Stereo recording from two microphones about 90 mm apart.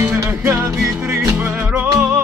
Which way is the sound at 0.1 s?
30° right (ahead or behind).